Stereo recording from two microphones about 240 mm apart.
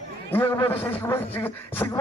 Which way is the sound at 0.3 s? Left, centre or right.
Centre.